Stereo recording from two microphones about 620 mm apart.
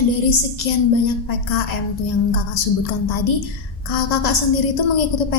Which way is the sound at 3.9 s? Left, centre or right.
Left.